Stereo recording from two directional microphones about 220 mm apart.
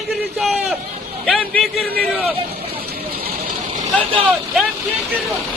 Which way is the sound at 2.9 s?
45° right (ahead or behind).